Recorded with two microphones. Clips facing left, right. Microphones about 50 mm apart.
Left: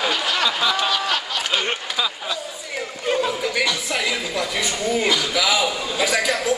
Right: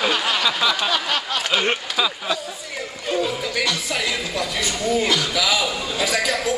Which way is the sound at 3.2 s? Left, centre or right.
Centre.